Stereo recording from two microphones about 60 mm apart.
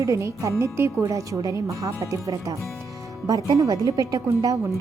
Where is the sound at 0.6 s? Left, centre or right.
Right.